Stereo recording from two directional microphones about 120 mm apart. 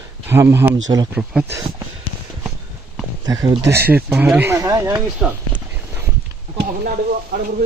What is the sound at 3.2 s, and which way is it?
Speech, 30° right (ahead or behind).